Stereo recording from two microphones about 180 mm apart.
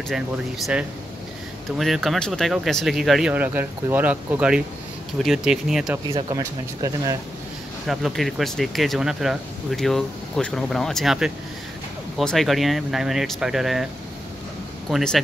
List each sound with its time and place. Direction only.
1.8 s speech: centre (ahead or behind)
6.1 s speech: 20° right (ahead or behind)
7.8 s speech: centre (ahead or behind)
14.9 s speech: centre (ahead or behind)